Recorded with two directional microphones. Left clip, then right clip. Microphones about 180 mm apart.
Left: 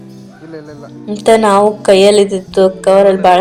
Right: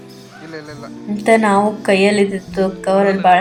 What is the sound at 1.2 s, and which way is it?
A woman's voice, 35° left (ahead or behind).